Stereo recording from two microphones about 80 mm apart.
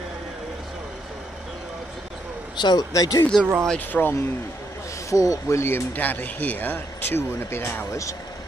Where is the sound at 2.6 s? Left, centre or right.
Left.